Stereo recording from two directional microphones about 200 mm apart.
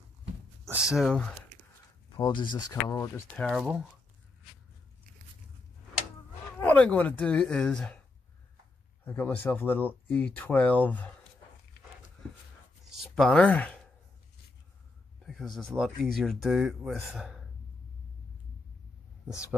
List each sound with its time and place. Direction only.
0.7 s speech: 5° right (ahead or behind)
2.0 s speech: 25° left (ahead or behind)
3.4 s speech: 5° right (ahead or behind)
6.6 s speech: 5° left (ahead or behind)
9.0 s speech: 10° left (ahead or behind)
13.1 s speech: centre (ahead or behind)
15.2 s speech: centre (ahead or behind)